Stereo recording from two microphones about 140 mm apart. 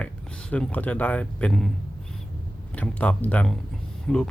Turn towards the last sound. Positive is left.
turn(degrees=5)  # may be behind; listen again after turning